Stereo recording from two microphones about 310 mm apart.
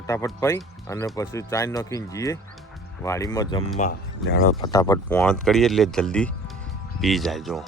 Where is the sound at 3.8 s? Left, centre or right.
Left.